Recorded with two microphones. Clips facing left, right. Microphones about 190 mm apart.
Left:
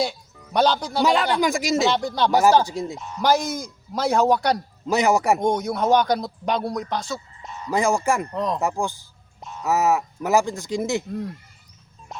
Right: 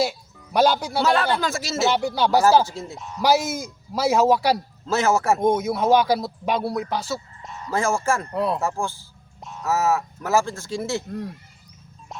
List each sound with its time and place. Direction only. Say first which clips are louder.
0.0 s speech: right 1 dB; 5° right (ahead or behind)
1.0 s speech: left 2 dB; 15° left (ahead or behind)
1.9 s speech: right 1 dB; 10° right (ahead or behind)
2.3 s speech: even; 15° left (ahead or behind)
3.0 s speech: right 1 dB; centre (ahead or behind)
4.9 s speech: left 1 dB; 15° left (ahead or behind)
5.4 s speech: right 2 dB; 5° right (ahead or behind)
7.7 s speech: left 2 dB; 15° left (ahead or behind)
8.3 s speech: right 2 dB; 10° right (ahead or behind)
8.6 s speech: left 2 dB; 15° left (ahead or behind)
9.4 s a sound: left 1 dB; centre (ahead or behind)
9.6 s speech: left 1 dB; 15° left (ahead or behind)
11.1 s speech: left 2 dB; centre (ahead or behind)